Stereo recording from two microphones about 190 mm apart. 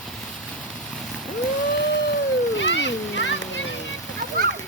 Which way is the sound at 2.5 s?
70° left (ahead or behind).